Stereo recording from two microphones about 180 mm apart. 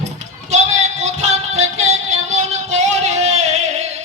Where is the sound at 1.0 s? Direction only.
40° right (ahead or behind).